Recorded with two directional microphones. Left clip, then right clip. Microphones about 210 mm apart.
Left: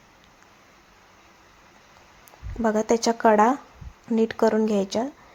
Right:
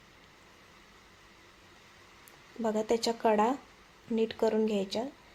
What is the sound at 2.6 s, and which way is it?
Speech, 20° left (ahead or behind).